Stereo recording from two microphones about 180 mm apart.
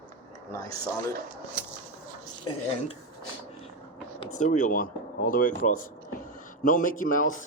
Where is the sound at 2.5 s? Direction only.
25° left (ahead or behind).